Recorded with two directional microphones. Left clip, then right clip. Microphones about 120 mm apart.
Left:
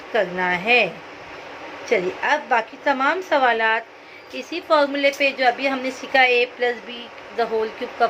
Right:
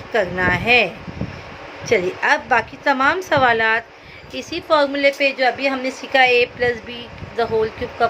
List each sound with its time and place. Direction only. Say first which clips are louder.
0.1 s a woman's voice: right 3 dB; 35° right (ahead or behind)
1.9 s a woman's voice: right 3 dB; 40° right (ahead or behind)